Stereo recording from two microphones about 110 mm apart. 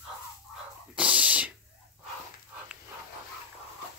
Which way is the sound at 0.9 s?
10° right (ahead or behind).